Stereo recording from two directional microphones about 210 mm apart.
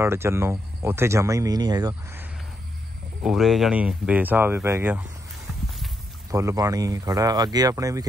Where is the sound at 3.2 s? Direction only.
Centre (ahead or behind).